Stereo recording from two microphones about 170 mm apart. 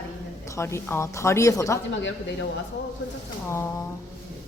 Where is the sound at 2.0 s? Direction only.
90° left.